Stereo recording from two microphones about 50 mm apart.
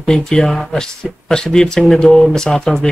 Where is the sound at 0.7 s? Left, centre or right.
Centre.